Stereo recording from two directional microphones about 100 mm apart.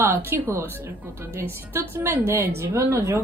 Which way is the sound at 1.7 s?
20° right (ahead or behind).